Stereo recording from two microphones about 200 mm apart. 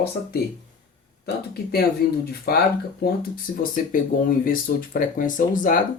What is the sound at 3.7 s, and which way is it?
Speech, 45° left (ahead or behind).